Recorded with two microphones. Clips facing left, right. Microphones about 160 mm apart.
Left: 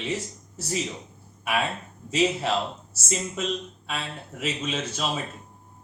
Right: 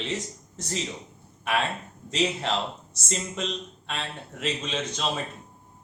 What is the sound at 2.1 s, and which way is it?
A man's voice, 5° left (ahead or behind).